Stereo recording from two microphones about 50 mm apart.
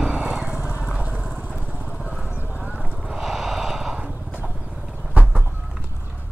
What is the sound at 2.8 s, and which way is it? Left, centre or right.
Clip-clop, centre.